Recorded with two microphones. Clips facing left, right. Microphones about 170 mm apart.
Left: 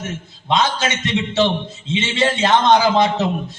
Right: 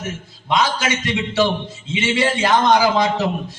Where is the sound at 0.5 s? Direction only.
25° left (ahead or behind).